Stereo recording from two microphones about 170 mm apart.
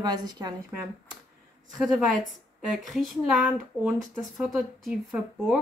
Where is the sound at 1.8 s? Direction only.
Centre (ahead or behind).